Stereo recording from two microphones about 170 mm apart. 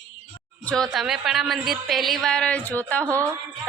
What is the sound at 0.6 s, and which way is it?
A woman's voice, 5° left (ahead or behind).